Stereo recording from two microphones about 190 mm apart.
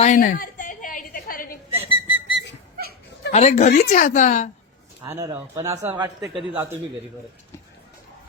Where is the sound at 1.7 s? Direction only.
10° right (ahead or behind).